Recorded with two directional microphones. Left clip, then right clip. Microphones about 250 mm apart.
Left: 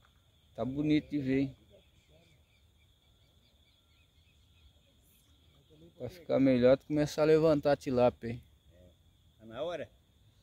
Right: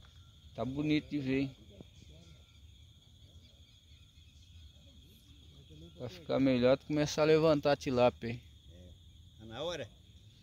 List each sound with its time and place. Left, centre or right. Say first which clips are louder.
0.6 s speech: left 3 dB; centre
5.9 s speech: left 3 dB; centre
9.5 s a sound: left 2 dB; right